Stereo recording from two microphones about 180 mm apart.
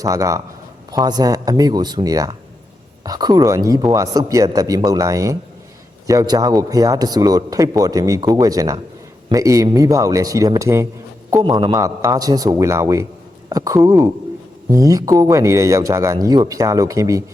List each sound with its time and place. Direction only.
0.0 s a man's voice: 20° right (ahead or behind)